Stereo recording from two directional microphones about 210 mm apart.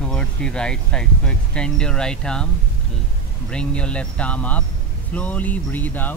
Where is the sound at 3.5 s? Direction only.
5° left (ahead or behind).